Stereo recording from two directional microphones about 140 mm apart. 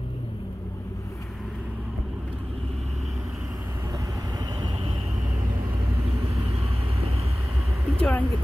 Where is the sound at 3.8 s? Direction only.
25° right (ahead or behind).